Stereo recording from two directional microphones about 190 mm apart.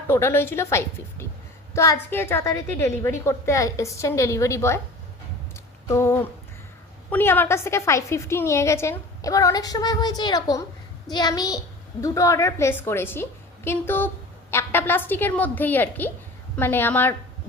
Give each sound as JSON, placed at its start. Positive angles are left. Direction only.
{"t": 0.1, "sound": "a woman's voice", "side_deg": 15}
{"t": 5.9, "sound": "a woman's voice", "side_deg": 15}